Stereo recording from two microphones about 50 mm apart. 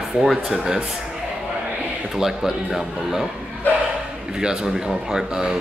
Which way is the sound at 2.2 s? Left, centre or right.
Centre.